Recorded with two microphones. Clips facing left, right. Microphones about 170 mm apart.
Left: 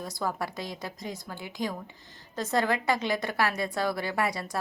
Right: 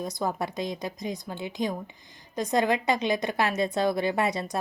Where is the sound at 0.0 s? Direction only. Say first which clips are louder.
Right 3 dB; 20° right (ahead or behind).